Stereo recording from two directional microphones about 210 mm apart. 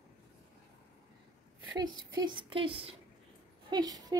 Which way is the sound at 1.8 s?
20° right (ahead or behind).